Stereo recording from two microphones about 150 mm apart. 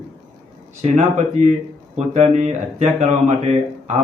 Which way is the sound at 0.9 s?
55° right (ahead or behind).